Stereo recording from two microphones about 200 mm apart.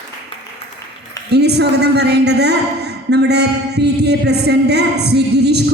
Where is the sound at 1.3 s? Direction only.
55° right (ahead or behind).